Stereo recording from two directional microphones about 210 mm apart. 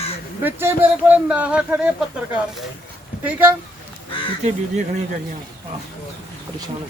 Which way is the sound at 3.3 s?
10° right (ahead or behind).